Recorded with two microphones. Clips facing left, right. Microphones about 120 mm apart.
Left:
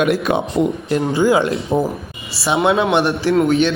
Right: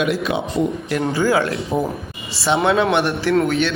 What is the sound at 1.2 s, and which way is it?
A man's voice, 20° left (ahead or behind).